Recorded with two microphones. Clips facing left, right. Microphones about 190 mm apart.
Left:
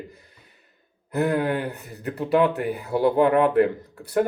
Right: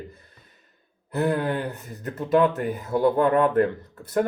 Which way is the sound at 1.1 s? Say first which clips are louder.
Left 1 dB; 15° left (ahead or behind).